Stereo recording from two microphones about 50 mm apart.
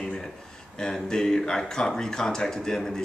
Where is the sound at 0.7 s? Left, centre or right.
Centre.